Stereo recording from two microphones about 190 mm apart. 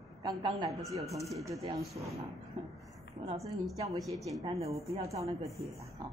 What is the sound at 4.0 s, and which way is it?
Speech, centre (ahead or behind).